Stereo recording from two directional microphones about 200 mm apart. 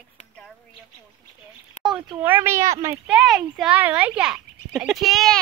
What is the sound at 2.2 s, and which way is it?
Speech, 10° right (ahead or behind).